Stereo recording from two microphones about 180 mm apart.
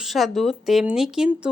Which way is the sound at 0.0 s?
Centre (ahead or behind).